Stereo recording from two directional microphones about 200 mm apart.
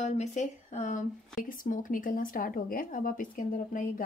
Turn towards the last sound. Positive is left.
turn(degrees=40)  # may be behind; listen again after turning